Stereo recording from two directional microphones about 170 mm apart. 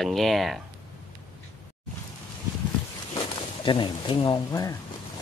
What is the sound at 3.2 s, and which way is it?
Speech, 30° left (ahead or behind).